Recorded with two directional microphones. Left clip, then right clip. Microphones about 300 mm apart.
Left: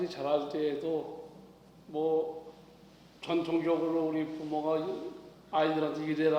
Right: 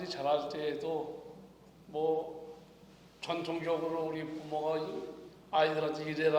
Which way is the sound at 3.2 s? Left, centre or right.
Right.